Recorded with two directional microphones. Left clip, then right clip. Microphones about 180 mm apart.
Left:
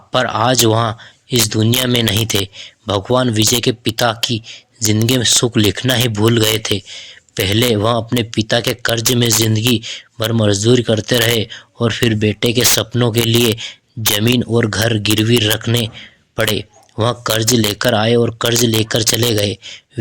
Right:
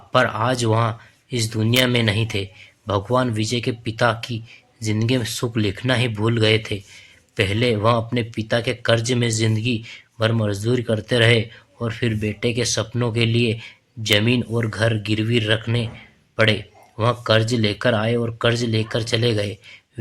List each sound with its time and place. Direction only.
0.1 s speech: 40° left (ahead or behind)